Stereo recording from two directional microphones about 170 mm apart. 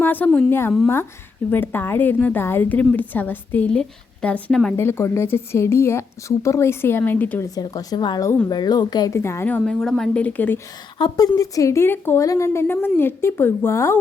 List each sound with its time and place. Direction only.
0.0 s a woman's voice: 10° left (ahead or behind)
10.9 s a woman's voice: 25° left (ahead or behind)